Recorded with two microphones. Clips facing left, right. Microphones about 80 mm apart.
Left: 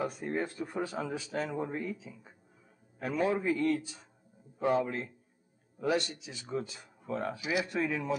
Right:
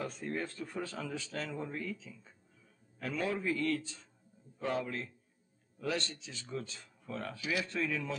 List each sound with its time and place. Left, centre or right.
0.0 s speech: centre